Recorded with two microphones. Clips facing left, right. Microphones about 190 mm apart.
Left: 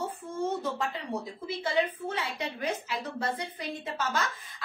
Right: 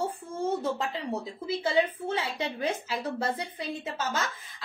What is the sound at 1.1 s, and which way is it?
A woman's voice, 25° right (ahead or behind).